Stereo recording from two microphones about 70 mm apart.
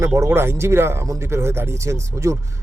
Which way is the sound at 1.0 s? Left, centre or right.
Right.